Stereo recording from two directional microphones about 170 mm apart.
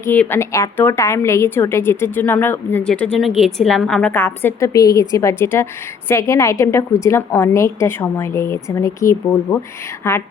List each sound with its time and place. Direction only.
0.0 s a woman's voice: 10° left (ahead or behind)